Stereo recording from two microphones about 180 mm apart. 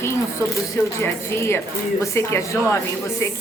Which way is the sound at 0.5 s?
15° left (ahead or behind).